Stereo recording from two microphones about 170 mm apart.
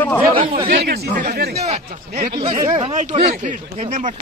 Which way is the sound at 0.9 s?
65° right (ahead or behind).